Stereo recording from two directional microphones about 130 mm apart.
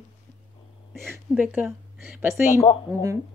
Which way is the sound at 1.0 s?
10° right (ahead or behind).